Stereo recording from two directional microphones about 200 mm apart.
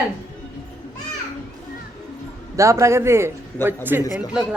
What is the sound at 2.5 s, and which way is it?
Speech, 15° right (ahead or behind).